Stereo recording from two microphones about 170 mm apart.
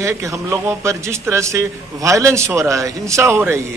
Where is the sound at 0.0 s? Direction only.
15° right (ahead or behind).